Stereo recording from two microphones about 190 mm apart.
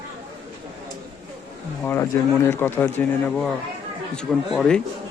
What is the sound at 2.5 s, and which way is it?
Speech, 10° left (ahead or behind).